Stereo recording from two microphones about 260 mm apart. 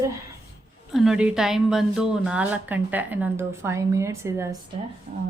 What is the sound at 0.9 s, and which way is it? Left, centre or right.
A woman's voice, centre.